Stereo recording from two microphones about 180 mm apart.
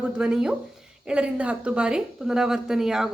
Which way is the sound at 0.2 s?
5° right (ahead or behind).